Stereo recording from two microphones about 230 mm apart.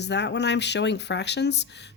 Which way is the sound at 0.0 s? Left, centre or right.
Left.